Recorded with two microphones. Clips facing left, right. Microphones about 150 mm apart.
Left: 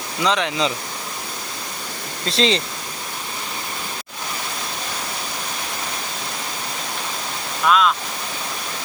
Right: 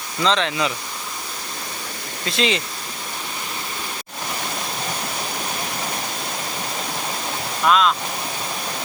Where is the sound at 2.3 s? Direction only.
30° left (ahead or behind).